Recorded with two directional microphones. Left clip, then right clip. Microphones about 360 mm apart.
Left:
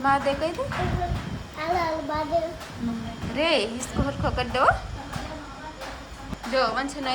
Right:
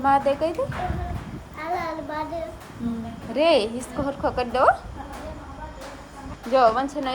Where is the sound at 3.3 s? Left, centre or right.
Centre.